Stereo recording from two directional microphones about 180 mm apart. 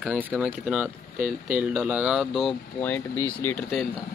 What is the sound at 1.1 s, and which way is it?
Speech, 45° right (ahead or behind).